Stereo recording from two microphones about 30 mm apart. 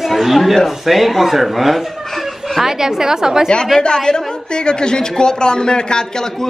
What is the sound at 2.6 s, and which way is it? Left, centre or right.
Speech, centre.